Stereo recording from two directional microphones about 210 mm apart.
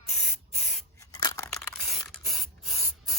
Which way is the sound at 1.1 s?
15° left (ahead or behind).